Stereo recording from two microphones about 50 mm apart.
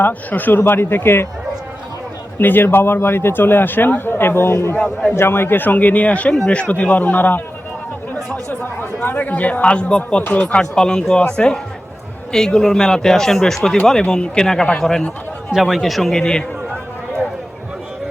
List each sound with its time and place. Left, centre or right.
0.0 s speech: left
0.6 s a man's voice: left
2.4 s a man's voice: left
8.4 s a man's voice: left; by 15.0 s centre
15.5 s speech: centre